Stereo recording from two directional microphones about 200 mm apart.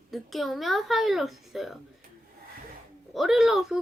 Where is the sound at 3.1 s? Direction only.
Centre (ahead or behind).